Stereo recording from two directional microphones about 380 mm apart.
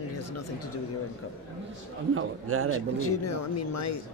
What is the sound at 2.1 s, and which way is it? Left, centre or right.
Speech, right.